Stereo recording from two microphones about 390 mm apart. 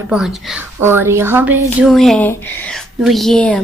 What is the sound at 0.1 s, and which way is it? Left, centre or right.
A woman's voice, centre.